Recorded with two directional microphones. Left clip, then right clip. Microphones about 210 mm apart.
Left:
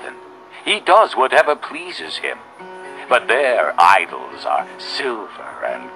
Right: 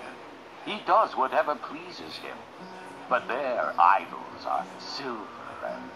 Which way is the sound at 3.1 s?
30° left (ahead or behind).